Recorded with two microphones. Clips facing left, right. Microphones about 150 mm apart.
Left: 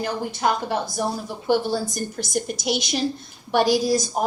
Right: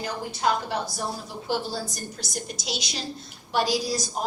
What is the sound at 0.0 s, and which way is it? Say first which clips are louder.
A woman's voice: left 3 dB; 55° left (ahead or behind).